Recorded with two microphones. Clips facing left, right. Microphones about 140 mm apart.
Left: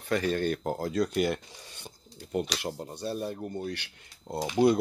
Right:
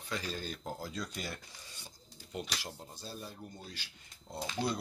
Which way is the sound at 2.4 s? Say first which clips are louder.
Left 9 dB; 75° left (ahead or behind).